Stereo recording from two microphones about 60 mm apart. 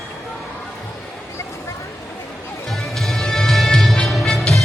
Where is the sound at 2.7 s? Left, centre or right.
Centre.